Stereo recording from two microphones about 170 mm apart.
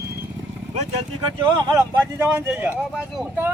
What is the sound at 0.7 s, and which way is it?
Speech, 40° right (ahead or behind).